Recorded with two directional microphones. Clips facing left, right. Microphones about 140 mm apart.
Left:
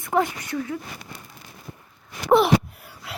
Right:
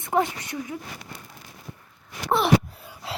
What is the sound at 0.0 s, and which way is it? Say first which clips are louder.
Speech: left 1 dB; 20° right (ahead or behind).